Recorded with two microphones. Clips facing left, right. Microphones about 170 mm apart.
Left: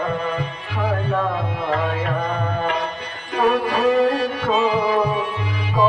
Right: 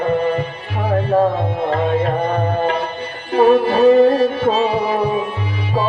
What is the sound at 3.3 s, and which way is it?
Music, 30° right (ahead or behind).